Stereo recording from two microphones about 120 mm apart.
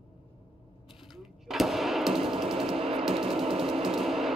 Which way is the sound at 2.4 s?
5° right (ahead or behind).